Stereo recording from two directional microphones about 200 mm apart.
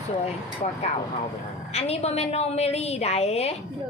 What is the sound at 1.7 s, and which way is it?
Speech, 30° left (ahead or behind).